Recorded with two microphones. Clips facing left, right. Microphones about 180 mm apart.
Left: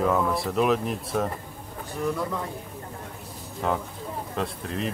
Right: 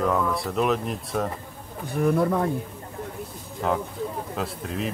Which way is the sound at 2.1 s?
55° right (ahead or behind).